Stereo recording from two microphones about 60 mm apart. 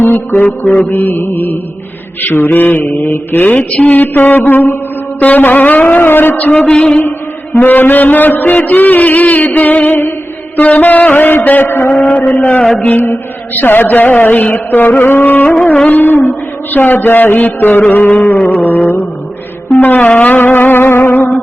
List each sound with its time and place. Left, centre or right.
0.0 s mantra: left
5.2 s music: left
6.6 s a sound: centre
7.6 s mantra: left
8.5 s music: left
10.6 s mantra: left
11.9 s music: centre; by 16.3 s left
16.7 s mantra: left
19.8 s music: left